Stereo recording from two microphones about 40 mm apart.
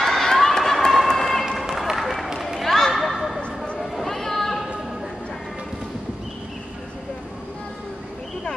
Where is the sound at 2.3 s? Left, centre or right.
Centre.